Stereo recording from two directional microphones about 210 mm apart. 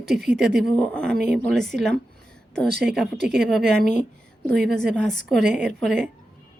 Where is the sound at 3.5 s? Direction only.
5° left (ahead or behind).